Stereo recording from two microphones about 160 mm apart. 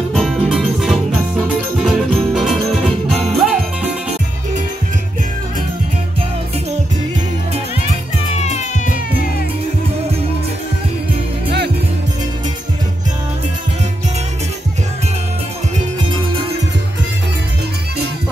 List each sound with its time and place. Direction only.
0.1 s music: centre (ahead or behind)
1.8 s jingle bell: centre (ahead or behind)
3.3 s music: 5° right (ahead or behind)
8.4 s music: 45° left (ahead or behind)